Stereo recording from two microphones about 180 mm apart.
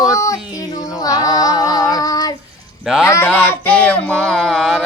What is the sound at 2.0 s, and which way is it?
Child singing, 20° left (ahead or behind).